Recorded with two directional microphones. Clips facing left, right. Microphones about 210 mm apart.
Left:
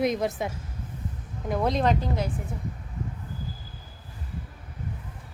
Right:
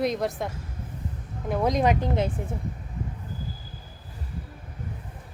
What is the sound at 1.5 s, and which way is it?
Speech, 10° right (ahead or behind).